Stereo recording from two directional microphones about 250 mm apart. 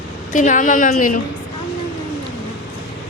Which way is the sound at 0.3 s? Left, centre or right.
Left.